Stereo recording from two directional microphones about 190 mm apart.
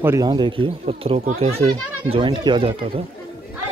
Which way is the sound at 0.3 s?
25° right (ahead or behind).